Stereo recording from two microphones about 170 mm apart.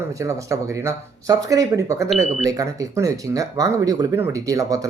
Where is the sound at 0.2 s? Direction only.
20° right (ahead or behind).